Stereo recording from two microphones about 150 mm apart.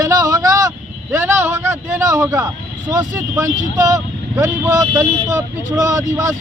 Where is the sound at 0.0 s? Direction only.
20° right (ahead or behind).